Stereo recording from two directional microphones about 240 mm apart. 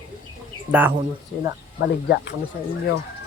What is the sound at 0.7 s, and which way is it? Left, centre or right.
Speech, centre.